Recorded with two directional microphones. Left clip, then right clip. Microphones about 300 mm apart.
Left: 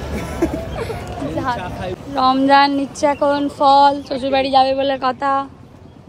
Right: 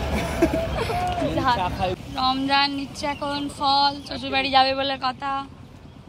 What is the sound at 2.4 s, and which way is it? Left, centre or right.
Speech, centre.